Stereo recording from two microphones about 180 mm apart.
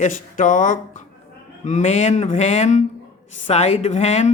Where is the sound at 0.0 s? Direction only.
45° left (ahead or behind).